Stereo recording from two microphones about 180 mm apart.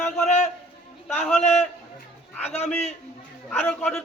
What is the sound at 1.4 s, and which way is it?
Speech, 40° left (ahead or behind).